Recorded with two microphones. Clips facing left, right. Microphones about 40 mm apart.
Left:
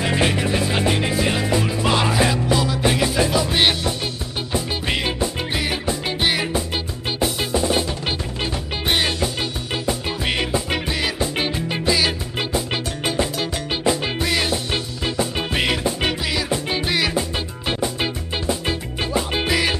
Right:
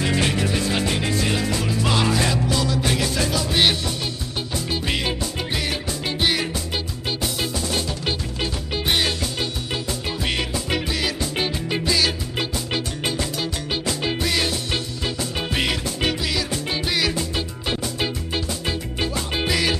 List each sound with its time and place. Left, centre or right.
0.0 s music: centre
7.5 s music: left
8.4 s music: centre